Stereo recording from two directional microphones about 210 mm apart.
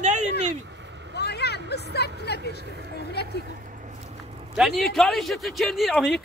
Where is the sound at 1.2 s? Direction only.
50° left (ahead or behind).